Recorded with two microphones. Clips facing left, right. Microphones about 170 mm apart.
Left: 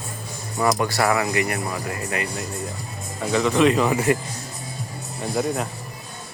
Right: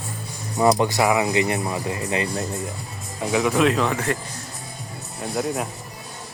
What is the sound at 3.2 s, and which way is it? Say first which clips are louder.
Speech: left 1 dB; 10° right (ahead or behind).